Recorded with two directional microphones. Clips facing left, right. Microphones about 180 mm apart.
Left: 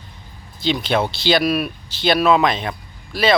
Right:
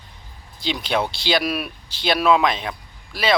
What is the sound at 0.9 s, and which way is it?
Speech, 5° right (ahead or behind).